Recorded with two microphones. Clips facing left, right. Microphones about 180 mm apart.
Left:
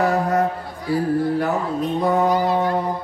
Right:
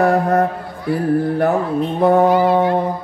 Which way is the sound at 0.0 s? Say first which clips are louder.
Right 4 dB; 55° right (ahead or behind).